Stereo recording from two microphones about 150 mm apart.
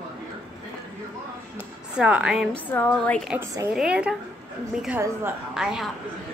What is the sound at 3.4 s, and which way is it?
Speech, 15° right (ahead or behind).